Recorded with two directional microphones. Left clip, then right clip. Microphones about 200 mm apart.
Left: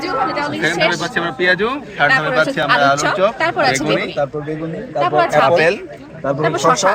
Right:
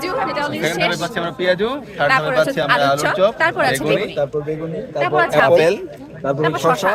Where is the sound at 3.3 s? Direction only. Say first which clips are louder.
Left 1 dB; 25° left (ahead or behind).